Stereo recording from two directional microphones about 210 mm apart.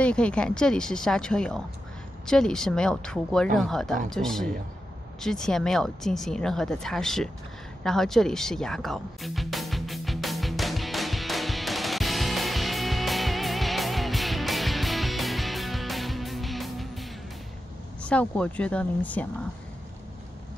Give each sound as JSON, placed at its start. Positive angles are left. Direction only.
{"t": 0.0, "sound": "speech", "side_deg": 5}
{"t": 7.8, "sound": "music", "side_deg": 0}
{"t": 18.0, "sound": "speech", "side_deg": 5}